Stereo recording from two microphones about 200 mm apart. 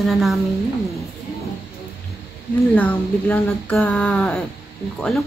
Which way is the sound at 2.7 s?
10° left (ahead or behind).